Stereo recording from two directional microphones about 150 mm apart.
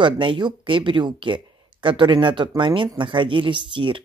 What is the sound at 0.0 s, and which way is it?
Speech, 35° right (ahead or behind).